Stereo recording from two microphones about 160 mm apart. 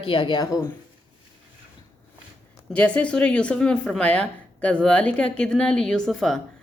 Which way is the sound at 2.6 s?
10° left (ahead or behind).